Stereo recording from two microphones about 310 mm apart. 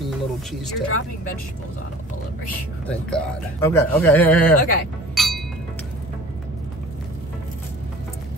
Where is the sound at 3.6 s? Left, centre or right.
Centre.